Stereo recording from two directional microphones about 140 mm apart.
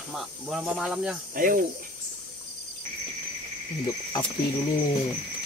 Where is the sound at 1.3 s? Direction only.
75° right (ahead or behind).